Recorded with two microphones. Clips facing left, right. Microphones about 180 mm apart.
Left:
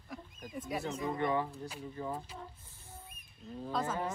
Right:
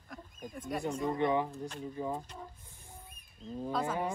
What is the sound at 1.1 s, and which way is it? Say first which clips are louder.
Speech: right 2 dB; 20° right (ahead or behind).